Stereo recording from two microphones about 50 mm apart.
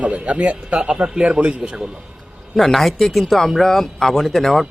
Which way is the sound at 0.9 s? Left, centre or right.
Centre.